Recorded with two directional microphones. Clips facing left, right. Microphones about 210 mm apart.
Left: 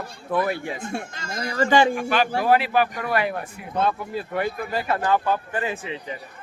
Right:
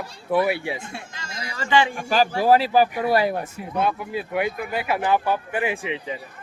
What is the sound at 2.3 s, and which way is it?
Speech, 35° right (ahead or behind).